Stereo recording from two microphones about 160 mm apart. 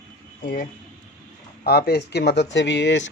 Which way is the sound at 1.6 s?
80° left.